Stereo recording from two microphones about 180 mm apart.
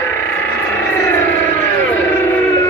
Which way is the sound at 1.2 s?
10° left (ahead or behind).